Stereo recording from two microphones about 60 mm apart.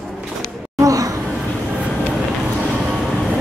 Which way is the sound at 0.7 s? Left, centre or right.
Right.